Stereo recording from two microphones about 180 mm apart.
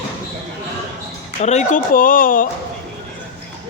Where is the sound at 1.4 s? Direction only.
40° left (ahead or behind).